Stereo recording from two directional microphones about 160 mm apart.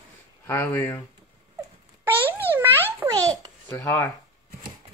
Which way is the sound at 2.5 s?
15° right (ahead or behind).